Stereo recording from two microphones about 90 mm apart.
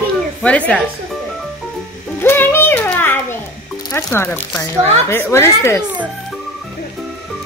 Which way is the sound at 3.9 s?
25° left (ahead or behind).